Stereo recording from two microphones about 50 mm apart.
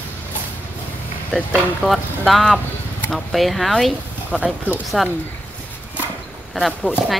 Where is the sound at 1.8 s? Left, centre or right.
Right.